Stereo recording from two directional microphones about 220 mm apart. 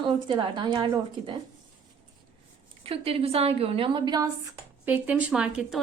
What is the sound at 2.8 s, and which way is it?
A woman's voice, 25° right (ahead or behind).